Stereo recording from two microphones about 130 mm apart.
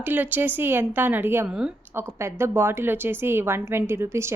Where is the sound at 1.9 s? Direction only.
20° right (ahead or behind).